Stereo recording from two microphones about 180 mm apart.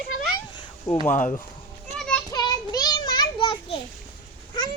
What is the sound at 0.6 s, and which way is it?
Cat, 20° left (ahead or behind).